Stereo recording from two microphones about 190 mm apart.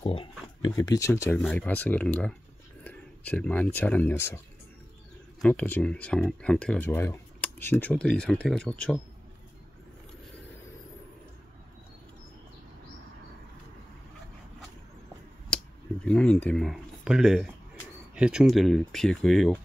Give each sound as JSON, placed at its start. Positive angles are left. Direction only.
{"t": 0.0, "sound": "speech", "side_deg": 30}
{"t": 0.7, "sound": "speech", "side_deg": 15}
{"t": 5.4, "sound": "speech", "side_deg": 10}
{"t": 16.1, "sound": "speech", "side_deg": 5}